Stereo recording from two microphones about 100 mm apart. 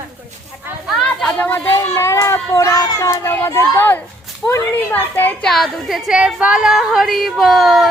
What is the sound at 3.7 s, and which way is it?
Speech, 20° left (ahead or behind).